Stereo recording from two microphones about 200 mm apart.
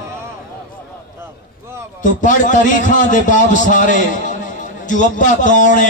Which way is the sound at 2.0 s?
40° left (ahead or behind).